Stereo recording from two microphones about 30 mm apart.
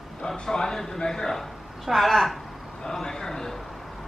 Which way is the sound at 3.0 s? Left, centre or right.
Centre.